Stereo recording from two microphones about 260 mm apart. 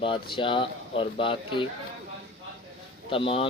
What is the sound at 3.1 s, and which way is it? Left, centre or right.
Speech, left.